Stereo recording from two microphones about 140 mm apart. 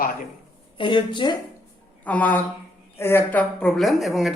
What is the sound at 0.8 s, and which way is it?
Speech, 35° left (ahead or behind).